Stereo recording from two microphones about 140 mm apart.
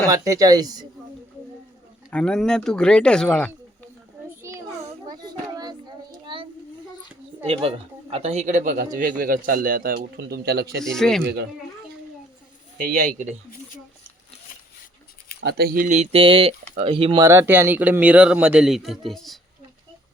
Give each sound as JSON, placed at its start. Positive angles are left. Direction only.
{"t": 0.1, "sound": "a woman's voice", "side_deg": -25}
{"t": 2.1, "sound": "speech", "side_deg": 5}
{"t": 5.0, "sound": "child singing", "side_deg": -30}
{"t": 7.4, "sound": "a man's voice", "side_deg": -45}
{"t": 10.8, "sound": "speech", "side_deg": 5}
{"t": 12.7, "sound": "a man's voice", "side_deg": -65}
{"t": 15.7, "sound": "mantra", "side_deg": -80}
{"t": 16.0, "sound": "a sound", "side_deg": -40}
{"t": 17.2, "sound": "a man's voice", "side_deg": -15}